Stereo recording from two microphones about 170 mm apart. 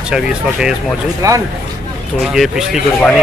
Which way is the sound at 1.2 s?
20° right (ahead or behind).